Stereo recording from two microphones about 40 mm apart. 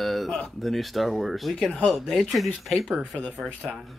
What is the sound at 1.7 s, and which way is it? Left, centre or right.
Speech, left.